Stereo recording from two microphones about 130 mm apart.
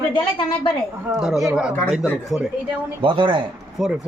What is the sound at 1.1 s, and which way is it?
Speech, centre (ahead or behind).